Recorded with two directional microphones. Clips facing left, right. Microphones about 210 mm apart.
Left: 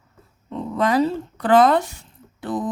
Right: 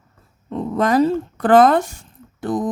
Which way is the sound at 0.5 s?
45° right (ahead or behind).